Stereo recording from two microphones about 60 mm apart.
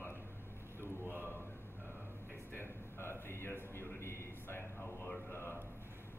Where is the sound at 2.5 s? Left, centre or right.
Left.